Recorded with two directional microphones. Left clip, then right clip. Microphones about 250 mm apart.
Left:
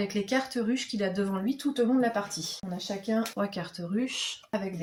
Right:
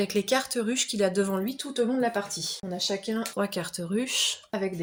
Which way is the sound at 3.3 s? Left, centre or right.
Right.